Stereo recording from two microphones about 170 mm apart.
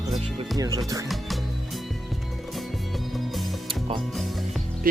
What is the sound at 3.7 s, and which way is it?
Music, 30° right (ahead or behind).